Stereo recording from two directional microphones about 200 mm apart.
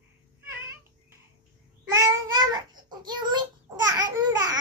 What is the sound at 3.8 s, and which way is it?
Babbling, 20° right (ahead or behind).